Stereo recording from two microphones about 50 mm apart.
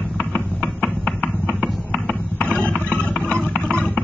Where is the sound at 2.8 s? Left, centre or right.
Right.